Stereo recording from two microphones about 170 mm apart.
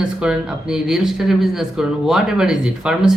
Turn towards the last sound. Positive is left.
turn(degrees=-5)  # may be behind; listen again after turning